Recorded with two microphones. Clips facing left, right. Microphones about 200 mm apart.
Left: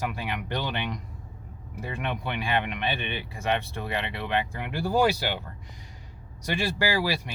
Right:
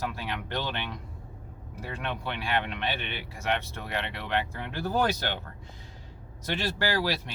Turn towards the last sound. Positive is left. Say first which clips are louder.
# left 2 dB
turn(degrees=10)  # may be behind; listen again after turning